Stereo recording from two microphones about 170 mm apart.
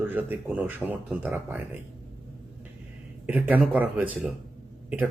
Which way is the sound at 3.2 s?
10° right (ahead or behind).